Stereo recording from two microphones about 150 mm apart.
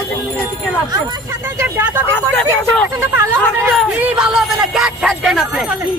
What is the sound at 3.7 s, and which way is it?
Speech, centre (ahead or behind).